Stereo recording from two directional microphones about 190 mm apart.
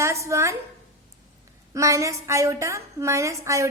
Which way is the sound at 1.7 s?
15° right (ahead or behind).